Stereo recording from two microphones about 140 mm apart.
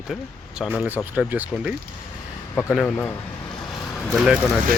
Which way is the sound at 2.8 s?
15° left (ahead or behind).